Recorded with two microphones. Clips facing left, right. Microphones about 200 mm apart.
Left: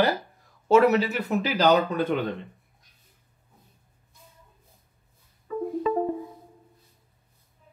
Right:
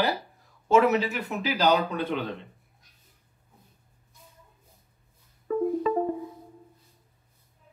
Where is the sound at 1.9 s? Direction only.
Centre (ahead or behind).